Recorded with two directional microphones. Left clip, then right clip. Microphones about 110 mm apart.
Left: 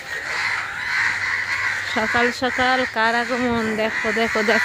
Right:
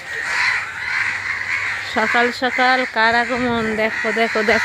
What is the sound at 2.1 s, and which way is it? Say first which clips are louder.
Speech: right 2 dB; 10° right (ahead or behind).